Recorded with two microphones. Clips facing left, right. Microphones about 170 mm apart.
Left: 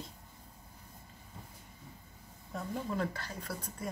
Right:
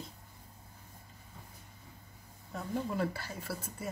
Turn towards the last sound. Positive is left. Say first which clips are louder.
# even
turn(degrees=-5)  # may be behind; listen again after turning